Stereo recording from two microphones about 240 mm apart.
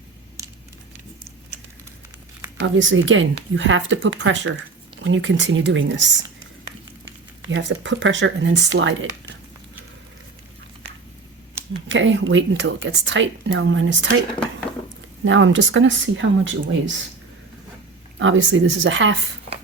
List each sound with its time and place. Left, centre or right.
0.4 s a sound: centre
2.6 s speech: right
7.4 s speech: right
11.9 s speech: right
15.2 s speech: right
18.2 s speech: right